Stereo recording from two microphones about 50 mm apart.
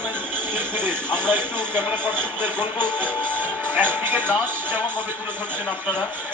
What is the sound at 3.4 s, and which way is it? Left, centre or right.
Speech, right.